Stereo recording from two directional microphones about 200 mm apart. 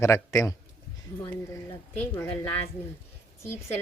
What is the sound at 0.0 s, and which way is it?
Speech, 15° left (ahead or behind).